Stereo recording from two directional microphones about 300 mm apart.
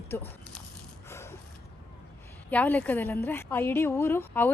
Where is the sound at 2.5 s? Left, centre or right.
Centre.